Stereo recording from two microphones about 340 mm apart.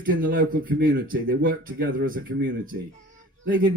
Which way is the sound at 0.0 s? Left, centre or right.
Right.